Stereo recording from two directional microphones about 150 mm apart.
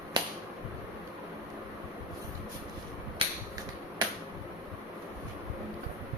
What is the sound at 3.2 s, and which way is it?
Finger snapping, 40° right (ahead or behind).